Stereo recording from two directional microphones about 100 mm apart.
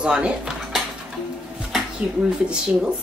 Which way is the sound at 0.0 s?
10° right (ahead or behind).